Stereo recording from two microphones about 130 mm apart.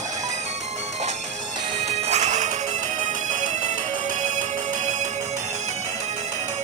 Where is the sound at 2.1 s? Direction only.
60° right (ahead or behind).